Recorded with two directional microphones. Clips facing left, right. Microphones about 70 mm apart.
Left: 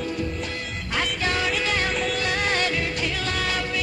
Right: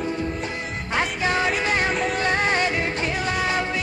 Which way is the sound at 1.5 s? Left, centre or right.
Right.